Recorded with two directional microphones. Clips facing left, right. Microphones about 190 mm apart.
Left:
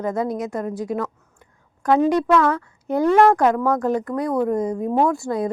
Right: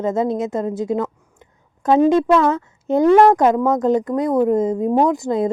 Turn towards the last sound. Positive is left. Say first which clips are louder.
# right 3 dB
turn(degrees=-20)  # may be behind; listen again after turning